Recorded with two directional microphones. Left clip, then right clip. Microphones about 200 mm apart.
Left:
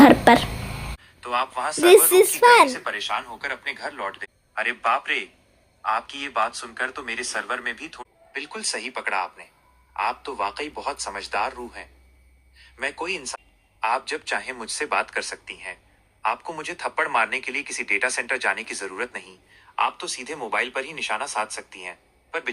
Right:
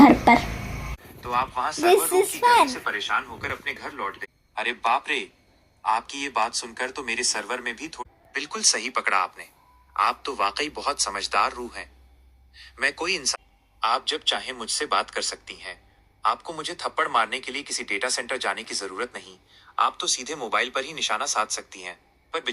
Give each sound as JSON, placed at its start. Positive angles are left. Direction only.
{"t": 0.0, "sound": "speech", "side_deg": 15}
{"t": 1.2, "sound": "a man's voice", "side_deg": 0}
{"t": 2.4, "sound": "speech", "side_deg": 25}
{"t": 2.6, "sound": "a man's voice", "side_deg": 0}
{"t": 16.6, "sound": "a man's voice", "side_deg": 5}